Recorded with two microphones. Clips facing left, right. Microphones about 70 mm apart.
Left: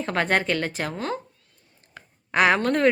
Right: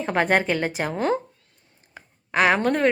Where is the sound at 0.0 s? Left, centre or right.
Centre.